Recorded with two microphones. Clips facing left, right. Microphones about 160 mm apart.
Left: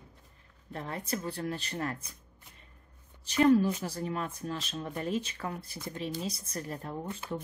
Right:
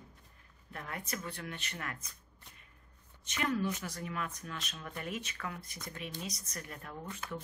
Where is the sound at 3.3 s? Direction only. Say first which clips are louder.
Left 10 dB; 35° left (ahead or behind).